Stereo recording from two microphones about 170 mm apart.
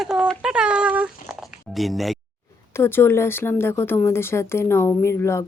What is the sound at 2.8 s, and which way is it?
Speech, 15° left (ahead or behind).